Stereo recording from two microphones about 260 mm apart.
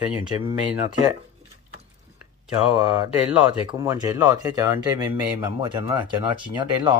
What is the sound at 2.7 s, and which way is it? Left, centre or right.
Speech, centre.